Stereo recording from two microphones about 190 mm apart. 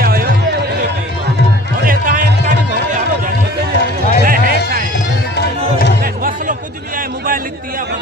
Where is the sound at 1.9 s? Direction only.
50° right (ahead or behind).